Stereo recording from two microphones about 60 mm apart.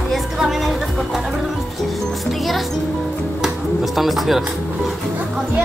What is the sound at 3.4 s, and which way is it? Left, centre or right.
Speech, centre.